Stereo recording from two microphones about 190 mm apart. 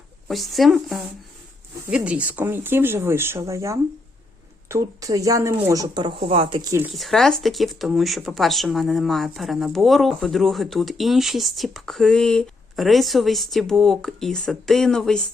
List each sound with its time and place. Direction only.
0.3 s speech: centre (ahead or behind); by 6.6 s 30° right (ahead or behind)
6.7 s speech: 15° right (ahead or behind)
6.9 s speech: centre (ahead or behind)